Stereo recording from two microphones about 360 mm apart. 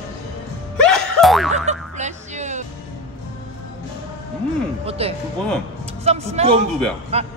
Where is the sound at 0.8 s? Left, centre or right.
Centre.